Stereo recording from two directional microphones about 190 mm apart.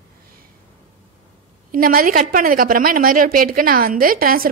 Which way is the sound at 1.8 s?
50° right (ahead or behind).